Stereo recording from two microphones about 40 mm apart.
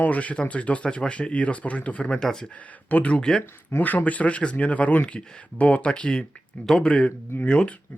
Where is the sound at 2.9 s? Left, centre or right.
Left.